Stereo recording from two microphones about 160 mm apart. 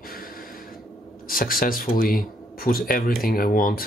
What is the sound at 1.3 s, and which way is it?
Speech, 65° left (ahead or behind).